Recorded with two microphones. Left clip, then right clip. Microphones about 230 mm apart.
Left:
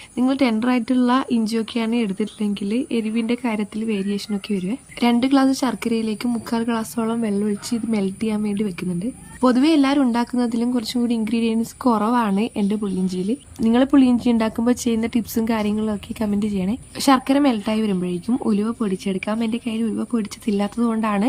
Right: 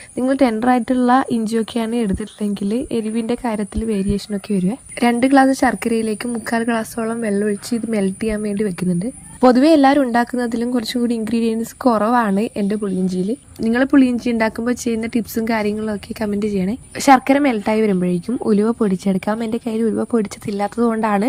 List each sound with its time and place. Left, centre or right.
0.2 s a woman's voice: centre